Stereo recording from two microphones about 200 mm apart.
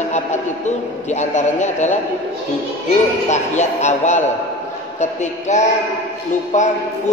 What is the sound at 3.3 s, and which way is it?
A man's voice, 35° left (ahead or behind).